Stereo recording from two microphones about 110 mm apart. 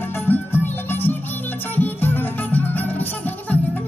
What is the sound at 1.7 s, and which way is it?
Music, 15° left (ahead or behind).